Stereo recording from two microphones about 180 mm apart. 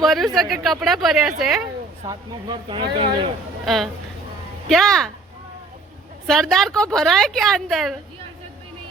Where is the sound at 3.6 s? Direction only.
Centre (ahead or behind).